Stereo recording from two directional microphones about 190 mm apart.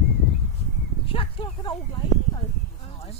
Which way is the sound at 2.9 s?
30° left (ahead or behind).